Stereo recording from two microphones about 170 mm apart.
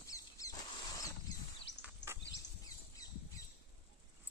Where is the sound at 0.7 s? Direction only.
20° left (ahead or behind).